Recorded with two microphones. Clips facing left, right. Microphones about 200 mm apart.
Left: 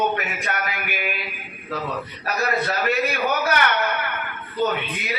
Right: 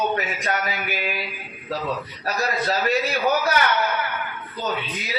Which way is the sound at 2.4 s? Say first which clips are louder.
Even; 60° left (ahead or behind).